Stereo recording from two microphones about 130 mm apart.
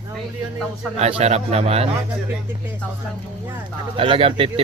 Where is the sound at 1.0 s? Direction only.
50° right (ahead or behind).